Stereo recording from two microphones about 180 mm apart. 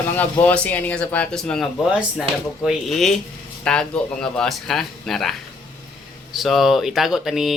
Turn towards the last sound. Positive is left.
turn(degrees=0)  # may be behind; listen again after turning